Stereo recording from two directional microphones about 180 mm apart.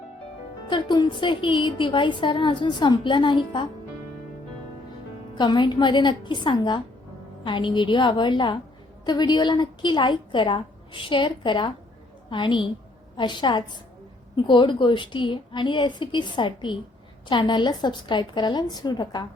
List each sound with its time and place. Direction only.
0.7 s a woman's voice: 25° left (ahead or behind)
5.3 s a woman's voice: 25° left (ahead or behind)